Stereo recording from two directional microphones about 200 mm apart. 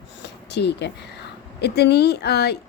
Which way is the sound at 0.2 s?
55° left (ahead or behind).